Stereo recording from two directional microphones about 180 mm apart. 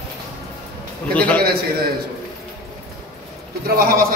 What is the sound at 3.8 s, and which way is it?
Speech, 55° right (ahead or behind).